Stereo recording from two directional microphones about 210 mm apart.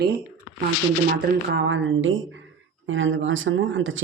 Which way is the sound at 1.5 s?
60° right (ahead or behind).